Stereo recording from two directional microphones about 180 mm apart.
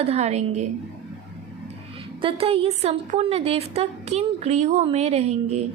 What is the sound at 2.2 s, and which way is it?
A woman's voice, 30° right (ahead or behind).